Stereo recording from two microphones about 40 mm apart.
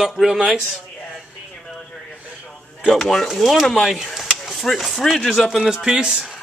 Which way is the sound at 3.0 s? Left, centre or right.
Centre.